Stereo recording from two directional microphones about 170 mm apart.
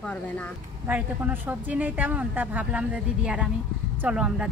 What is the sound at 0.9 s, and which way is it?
Speech, 10° right (ahead or behind).